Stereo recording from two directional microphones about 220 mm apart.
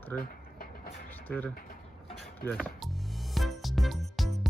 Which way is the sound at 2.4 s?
5° left (ahead or behind).